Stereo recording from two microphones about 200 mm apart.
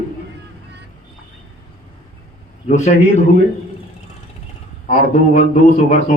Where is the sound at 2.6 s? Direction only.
35° left (ahead or behind).